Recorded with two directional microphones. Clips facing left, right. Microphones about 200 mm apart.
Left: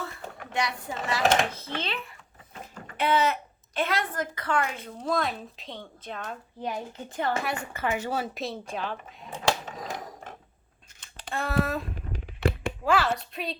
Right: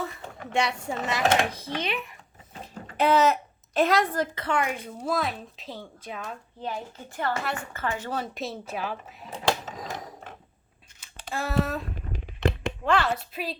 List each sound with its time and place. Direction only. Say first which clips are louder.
0.5 s speech: right 4 dB; 25° right (ahead or behind)
2.5 s a sound: right 2 dB; 35° right (ahead or behind)
3.8 s speech: right 6 dB; 40° right (ahead or behind); by 6.3 s 5° right (ahead or behind)
6.6 s speech: left 1 dB; 15° left (ahead or behind); by 9.1 s 5° right (ahead or behind)
11.0 s a sound: even; 5° right (ahead or behind)
12.5 s a child's voice: even; 5° left (ahead or behind)